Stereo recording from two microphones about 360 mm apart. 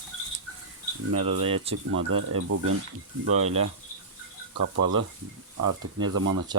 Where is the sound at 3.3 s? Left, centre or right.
Centre.